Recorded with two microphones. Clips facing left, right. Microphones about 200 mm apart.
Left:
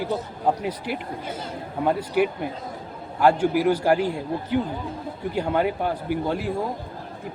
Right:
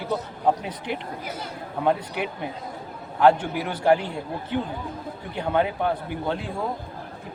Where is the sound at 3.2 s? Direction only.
10° left (ahead or behind).